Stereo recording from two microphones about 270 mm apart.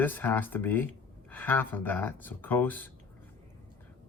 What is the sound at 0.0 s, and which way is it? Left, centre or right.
Speech, centre.